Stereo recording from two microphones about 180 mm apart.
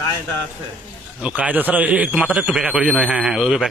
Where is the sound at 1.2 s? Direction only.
5° right (ahead or behind).